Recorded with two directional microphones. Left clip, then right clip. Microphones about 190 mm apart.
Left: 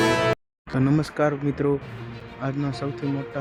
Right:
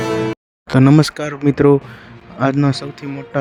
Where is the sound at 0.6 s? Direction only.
50° right (ahead or behind).